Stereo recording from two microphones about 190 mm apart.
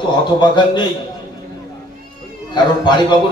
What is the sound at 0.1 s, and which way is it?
Speech, 25° left (ahead or behind).